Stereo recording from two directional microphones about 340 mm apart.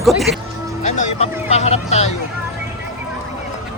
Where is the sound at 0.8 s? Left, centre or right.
Centre.